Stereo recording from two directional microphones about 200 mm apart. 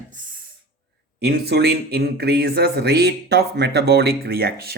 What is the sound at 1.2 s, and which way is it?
Speech, 55° right (ahead or behind).